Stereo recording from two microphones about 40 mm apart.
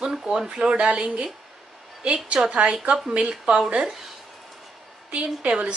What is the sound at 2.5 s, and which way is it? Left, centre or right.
A woman's voice, right.